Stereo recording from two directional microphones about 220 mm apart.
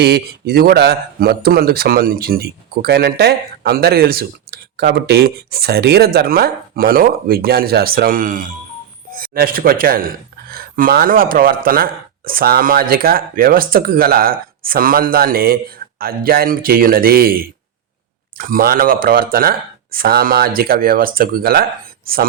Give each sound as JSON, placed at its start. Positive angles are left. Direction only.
{"t": 0.0, "sound": "speech", "side_deg": -45}